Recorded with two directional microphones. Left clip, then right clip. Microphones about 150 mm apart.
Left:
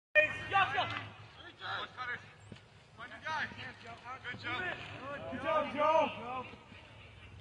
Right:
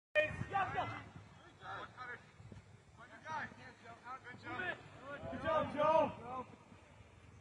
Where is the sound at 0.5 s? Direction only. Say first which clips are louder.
Left 7 dB; centre (ahead or behind).